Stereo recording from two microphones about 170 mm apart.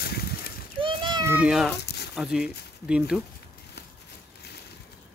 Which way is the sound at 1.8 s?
75° left (ahead or behind).